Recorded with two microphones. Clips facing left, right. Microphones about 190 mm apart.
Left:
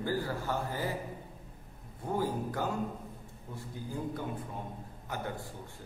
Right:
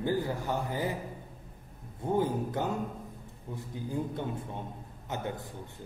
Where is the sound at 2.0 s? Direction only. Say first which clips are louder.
Right 4 dB; 20° right (ahead or behind).